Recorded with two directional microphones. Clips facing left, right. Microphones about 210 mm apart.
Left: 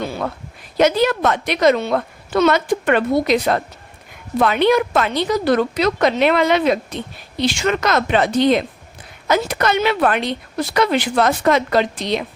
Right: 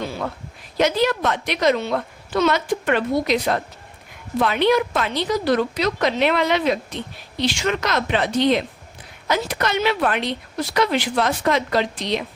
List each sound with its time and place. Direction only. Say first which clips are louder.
0.8 s a woman's voice: left 4 dB; 50° left (ahead or behind)